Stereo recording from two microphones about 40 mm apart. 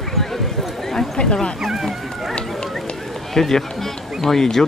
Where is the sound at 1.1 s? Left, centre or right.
Centre.